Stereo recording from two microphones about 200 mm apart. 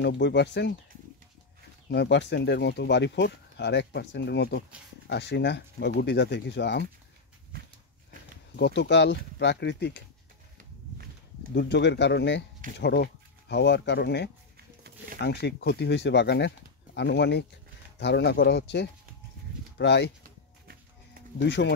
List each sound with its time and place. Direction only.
0.0 s speech: 60° left (ahead or behind)
1.9 s speech: 60° left (ahead or behind)
8.5 s speech: 55° left (ahead or behind)
11.5 s speech: 60° left (ahead or behind)
21.4 s speech: 60° left (ahead or behind)